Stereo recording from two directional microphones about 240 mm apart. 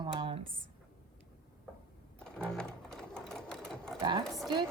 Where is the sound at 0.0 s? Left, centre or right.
Centre.